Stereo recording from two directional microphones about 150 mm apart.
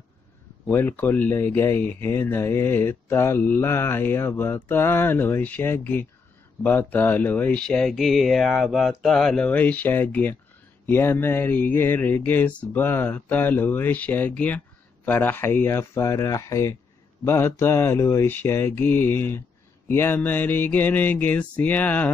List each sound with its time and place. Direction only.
0.7 s speech: 15° left (ahead or behind)